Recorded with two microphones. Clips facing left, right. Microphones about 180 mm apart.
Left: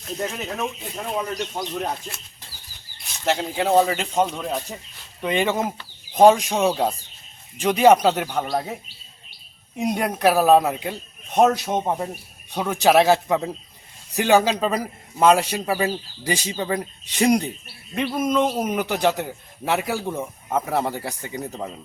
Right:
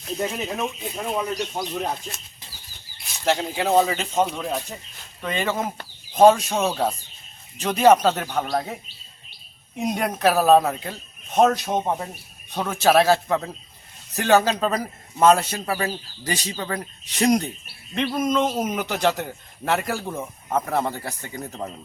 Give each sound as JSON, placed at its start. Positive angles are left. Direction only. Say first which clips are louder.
{"t": 0.2, "sound": "speech", "louder": "right 1 dB", "side_deg": -10}
{"t": 3.1, "sound": "a man's voice", "louder": "right 1 dB", "side_deg": 0}
{"t": 4.3, "sound": "speech", "louder": "even", "side_deg": 0}
{"t": 5.2, "sound": "a man's voice", "louder": "left 3 dB", "side_deg": 15}
{"t": 9.8, "sound": "a man's voice", "louder": "left 1 dB", "side_deg": 10}